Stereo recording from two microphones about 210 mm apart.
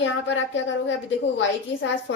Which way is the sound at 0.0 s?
65° left (ahead or behind).